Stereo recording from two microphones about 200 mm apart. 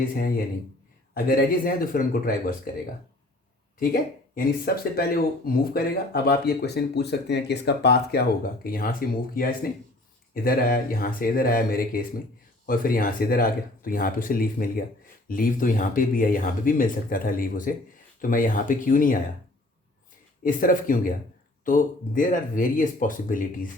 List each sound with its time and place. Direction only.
0.0 s speech: 45° left (ahead or behind)
20.4 s speech: 45° left (ahead or behind)